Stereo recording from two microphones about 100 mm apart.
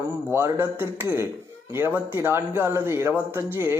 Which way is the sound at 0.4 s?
25° right (ahead or behind).